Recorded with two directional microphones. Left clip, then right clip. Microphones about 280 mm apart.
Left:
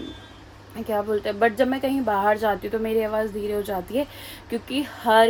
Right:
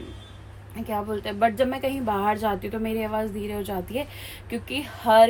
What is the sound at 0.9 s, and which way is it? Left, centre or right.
Speech, centre.